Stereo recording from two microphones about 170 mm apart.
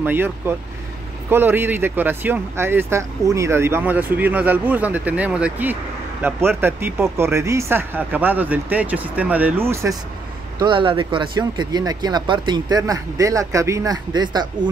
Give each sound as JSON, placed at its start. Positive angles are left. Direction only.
{"t": 0.0, "sound": "speech", "side_deg": -10}
{"t": 10.6, "sound": "speech", "side_deg": -30}